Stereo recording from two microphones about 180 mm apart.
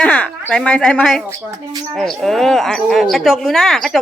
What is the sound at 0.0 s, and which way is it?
Speech, 5° left (ahead or behind).